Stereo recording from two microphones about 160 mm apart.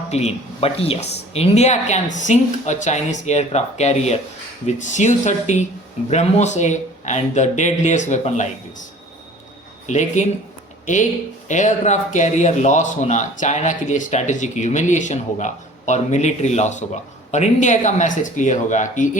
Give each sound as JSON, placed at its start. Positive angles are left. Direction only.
{"t": 0.1, "sound": "speech", "side_deg": 40}
{"t": 11.4, "sound": "speech", "side_deg": 50}